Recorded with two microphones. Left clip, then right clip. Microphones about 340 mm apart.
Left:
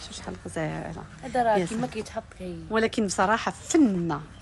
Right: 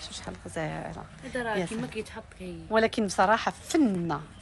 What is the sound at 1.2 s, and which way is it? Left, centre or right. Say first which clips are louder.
Speech: left 8 dB; left.